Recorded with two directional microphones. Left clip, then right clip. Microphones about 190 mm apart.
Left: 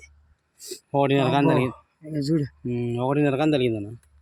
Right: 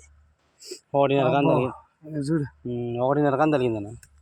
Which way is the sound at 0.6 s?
45° left (ahead or behind).